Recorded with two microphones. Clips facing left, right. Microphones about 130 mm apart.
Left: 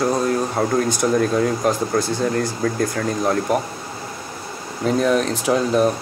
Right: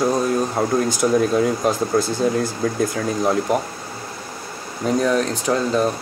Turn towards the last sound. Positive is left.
turn(degrees=5)  # may be behind; listen again after turning